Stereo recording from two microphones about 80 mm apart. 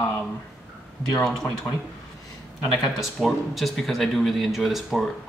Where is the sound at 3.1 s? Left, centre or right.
Centre.